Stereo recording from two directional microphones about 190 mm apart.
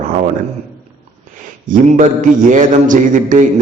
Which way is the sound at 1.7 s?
40° right (ahead or behind).